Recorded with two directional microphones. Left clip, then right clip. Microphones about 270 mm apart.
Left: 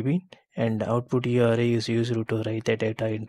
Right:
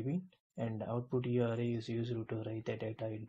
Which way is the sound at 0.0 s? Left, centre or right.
Left.